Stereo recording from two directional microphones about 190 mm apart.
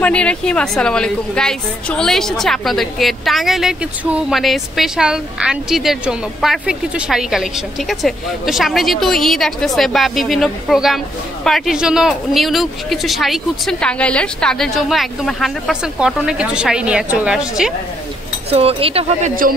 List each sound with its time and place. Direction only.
0.0 s a woman's voice: 5° left (ahead or behind)
18.5 s speech: 30° right (ahead or behind)